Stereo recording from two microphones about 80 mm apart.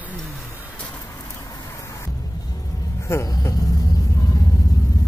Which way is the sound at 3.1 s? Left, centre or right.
Left.